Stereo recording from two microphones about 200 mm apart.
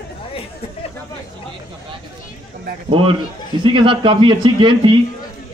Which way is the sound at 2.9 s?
25° right (ahead or behind).